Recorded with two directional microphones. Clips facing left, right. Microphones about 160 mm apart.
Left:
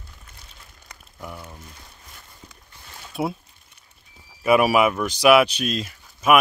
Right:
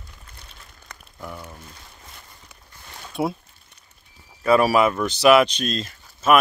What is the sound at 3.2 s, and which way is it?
Speech, centre (ahead or behind).